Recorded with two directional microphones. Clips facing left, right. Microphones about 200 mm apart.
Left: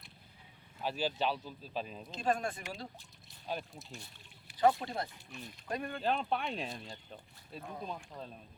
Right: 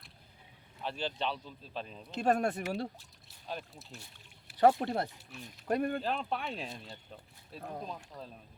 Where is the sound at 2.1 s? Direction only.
65° right (ahead or behind).